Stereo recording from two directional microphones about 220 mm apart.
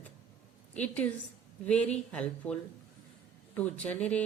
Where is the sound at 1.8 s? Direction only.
30° left (ahead or behind).